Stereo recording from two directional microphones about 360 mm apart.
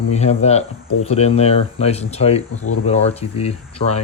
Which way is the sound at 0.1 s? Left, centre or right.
Centre.